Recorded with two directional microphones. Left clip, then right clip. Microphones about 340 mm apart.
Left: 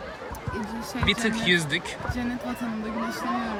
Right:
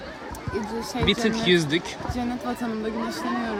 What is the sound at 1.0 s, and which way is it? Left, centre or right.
Speech, centre.